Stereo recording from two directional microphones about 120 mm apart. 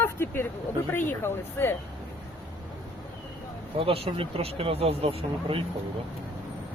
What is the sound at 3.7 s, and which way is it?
Speech, 50° right (ahead or behind).